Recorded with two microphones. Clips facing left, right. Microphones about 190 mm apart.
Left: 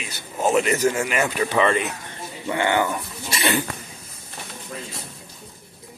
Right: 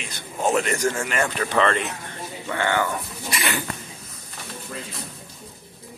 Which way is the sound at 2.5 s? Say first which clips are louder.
Left 2 dB; 15° left (ahead or behind).